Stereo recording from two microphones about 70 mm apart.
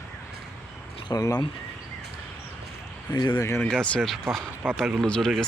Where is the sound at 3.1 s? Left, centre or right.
Left.